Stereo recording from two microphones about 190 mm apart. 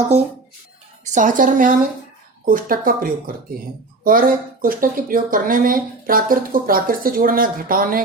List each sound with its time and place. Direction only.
1.0 s speech: 40° right (ahead or behind)